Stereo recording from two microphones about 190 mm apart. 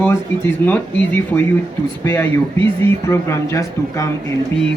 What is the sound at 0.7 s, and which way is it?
Speech, 10° left (ahead or behind).